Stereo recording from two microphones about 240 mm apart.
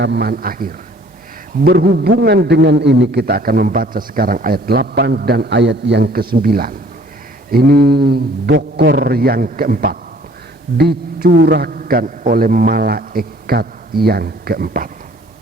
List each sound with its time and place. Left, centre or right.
0.0 s a man's voice: right